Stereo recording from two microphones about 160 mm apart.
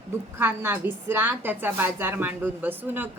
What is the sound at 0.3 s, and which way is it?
A woman's voice, 15° right (ahead or behind).